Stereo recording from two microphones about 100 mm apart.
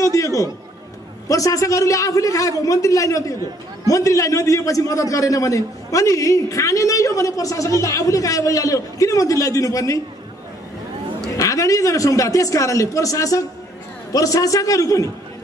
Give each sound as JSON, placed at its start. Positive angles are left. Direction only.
{"t": 0.0, "sound": "a man's voice", "side_deg": 35}
{"t": 11.3, "sound": "a man's voice", "side_deg": 35}